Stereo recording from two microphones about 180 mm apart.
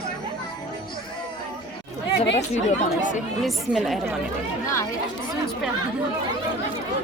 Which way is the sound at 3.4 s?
Centre (ahead or behind).